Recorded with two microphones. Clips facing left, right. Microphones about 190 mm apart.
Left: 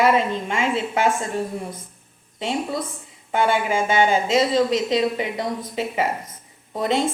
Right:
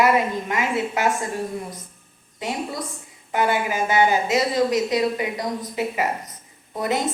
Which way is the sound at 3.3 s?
25° left (ahead or behind).